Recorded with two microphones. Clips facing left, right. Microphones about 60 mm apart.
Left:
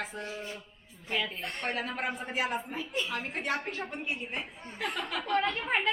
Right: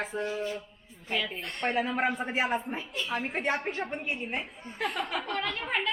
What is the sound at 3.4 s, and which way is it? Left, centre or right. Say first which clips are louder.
Speech: right 2 dB; right.